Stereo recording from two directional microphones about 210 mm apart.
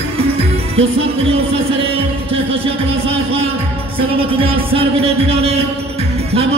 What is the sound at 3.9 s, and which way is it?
A man's voice, 25° right (ahead or behind).